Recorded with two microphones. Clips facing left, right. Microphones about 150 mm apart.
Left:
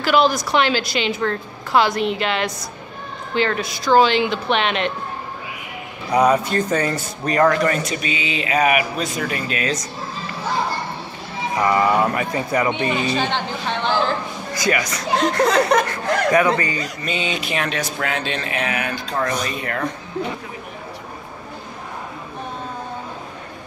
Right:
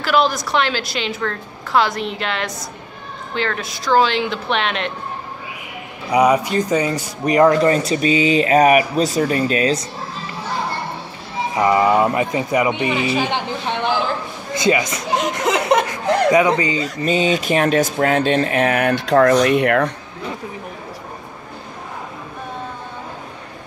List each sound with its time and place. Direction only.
0.0 s a woman's voice: centre (ahead or behind)
3.7 s a woman's voice: centre (ahead or behind)
6.1 s speech: 15° right (ahead or behind); by 9.8 s 35° right (ahead or behind)
11.5 s a man's voice: 20° right (ahead or behind)
17.0 s speech: 40° right (ahead or behind); by 19.9 s 70° right (ahead or behind)